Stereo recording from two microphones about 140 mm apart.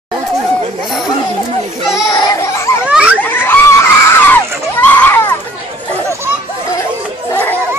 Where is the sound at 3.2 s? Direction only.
15° left (ahead or behind).